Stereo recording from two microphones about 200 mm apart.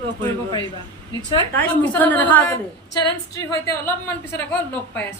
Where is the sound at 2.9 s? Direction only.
20° left (ahead or behind).